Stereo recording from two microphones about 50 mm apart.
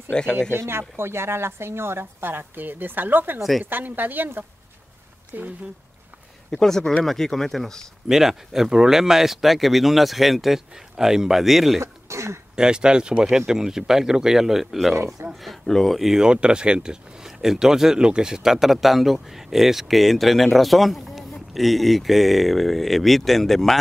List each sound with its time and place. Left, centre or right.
0.1 s speech: centre
0.5 s a woman's voice: right
5.3 s speech: right
6.6 s speech: centre
8.1 s speech: centre
11.8 s throat clearing: right
12.5 s speech: centre
15.2 s speech: right
15.6 s speech: centre
16.0 s speech: centre